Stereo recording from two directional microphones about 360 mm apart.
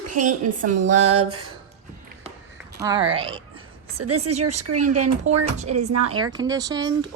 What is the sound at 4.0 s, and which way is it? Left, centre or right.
Speech, right.